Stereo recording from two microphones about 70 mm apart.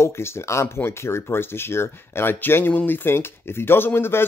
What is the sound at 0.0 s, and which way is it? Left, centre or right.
Speech, left.